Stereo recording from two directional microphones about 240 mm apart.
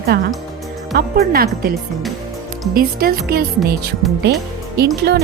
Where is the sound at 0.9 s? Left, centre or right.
Right.